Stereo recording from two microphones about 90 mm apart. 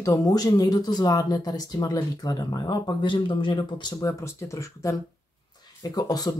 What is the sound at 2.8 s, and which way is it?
Speech, 65° left (ahead or behind).